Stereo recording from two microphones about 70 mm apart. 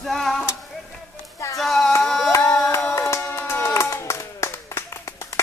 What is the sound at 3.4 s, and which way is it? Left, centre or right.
Clapping, left.